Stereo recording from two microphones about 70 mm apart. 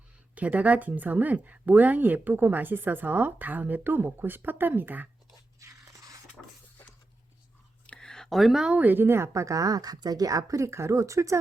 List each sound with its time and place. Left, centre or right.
0.3 s speech: right
5.5 s crunch: right
7.9 s a sound: centre
8.7 s speech: right